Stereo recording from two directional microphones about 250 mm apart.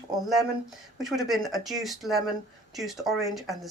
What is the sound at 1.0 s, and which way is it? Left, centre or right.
Speech, centre.